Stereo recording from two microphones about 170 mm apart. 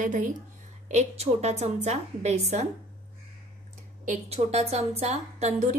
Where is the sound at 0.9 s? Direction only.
40° right (ahead or behind).